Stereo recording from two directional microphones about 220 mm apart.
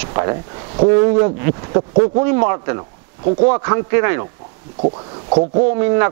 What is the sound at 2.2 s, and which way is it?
Speech, 15° right (ahead or behind).